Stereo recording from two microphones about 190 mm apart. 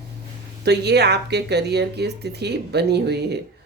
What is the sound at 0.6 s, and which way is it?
Speech, 60° right (ahead or behind).